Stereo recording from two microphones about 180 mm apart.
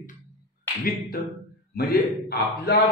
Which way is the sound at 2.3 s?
60° left (ahead or behind).